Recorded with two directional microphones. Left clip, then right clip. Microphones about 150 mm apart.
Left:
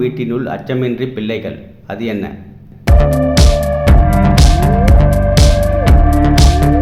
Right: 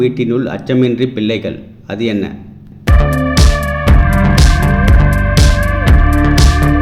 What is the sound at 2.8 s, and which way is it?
Music, centre (ahead or behind).